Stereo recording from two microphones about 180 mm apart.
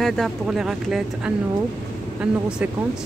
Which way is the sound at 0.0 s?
Centre (ahead or behind).